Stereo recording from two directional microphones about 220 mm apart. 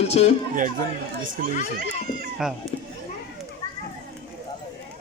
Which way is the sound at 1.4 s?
40° right (ahead or behind).